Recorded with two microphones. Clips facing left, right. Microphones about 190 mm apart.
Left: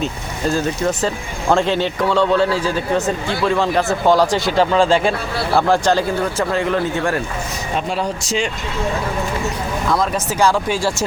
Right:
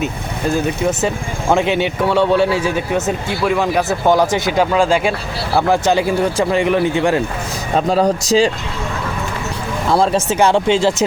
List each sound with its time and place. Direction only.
0.5 s speech: 10° right (ahead or behind)
4.0 s speech: 20° right (ahead or behind)
4.6 s speech: 5° right (ahead or behind)
5.8 s speech: 15° right (ahead or behind)
7.8 s speech: 40° right (ahead or behind)
9.9 s speech: 30° right (ahead or behind)